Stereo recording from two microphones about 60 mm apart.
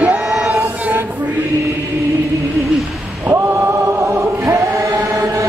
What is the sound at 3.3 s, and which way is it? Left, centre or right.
Choir, right.